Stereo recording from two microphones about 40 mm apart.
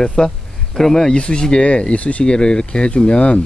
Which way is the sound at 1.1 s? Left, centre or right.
Left.